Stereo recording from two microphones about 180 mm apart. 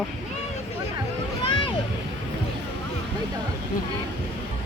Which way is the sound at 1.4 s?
30° left (ahead or behind).